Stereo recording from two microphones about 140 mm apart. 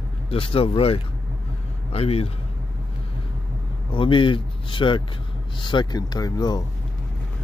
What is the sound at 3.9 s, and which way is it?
Speech, 35° left (ahead or behind).